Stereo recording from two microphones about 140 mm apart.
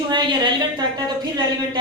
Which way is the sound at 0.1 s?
35° right (ahead or behind).